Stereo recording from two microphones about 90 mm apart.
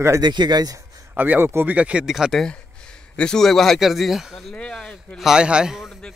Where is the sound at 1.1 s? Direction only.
20° right (ahead or behind).